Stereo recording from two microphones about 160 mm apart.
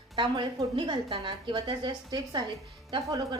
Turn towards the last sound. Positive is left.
turn(degrees=-25)  # may be behind; listen again after turning